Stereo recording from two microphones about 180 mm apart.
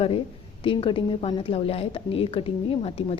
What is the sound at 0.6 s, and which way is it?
A woman's voice, 30° left (ahead or behind).